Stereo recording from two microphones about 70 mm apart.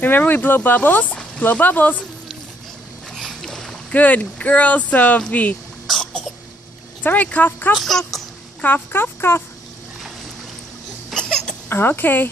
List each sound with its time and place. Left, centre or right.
0.0 s speech: left
3.2 s boat: centre
3.9 s speech: left
5.9 s cough: centre
7.0 s speech: left
7.7 s speech: centre
8.6 s speech: left
11.1 s cough: centre
11.7 s speech: left